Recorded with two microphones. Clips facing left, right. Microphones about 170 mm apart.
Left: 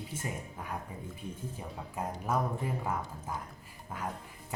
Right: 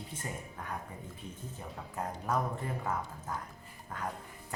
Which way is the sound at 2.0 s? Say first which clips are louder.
Left 1 dB; 10° left (ahead or behind).